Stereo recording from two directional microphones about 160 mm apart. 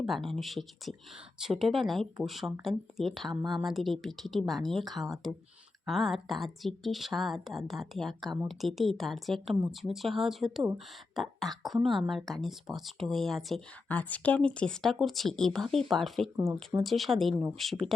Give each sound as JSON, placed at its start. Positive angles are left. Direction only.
{"t": 0.0, "sound": "a woman's voice", "side_deg": 0}